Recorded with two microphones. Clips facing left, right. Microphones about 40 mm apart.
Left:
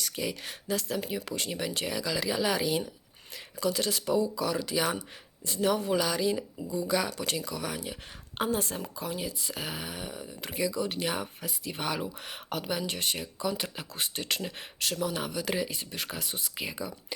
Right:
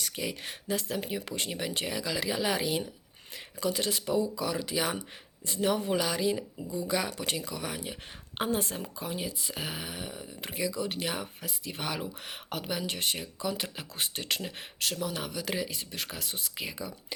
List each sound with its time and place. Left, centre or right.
0.0 s speech: centre
6.0 s speech: centre
8.5 s speech: centre
9.0 s speech: right; by 16.9 s centre